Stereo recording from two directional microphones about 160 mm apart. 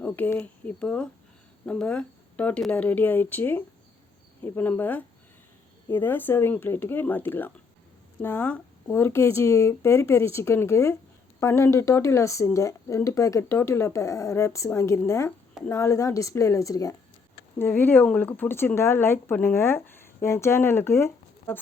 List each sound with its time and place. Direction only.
0.0 s speech: 10° left (ahead or behind)